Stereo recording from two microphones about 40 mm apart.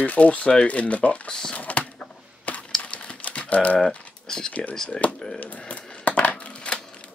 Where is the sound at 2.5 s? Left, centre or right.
Left.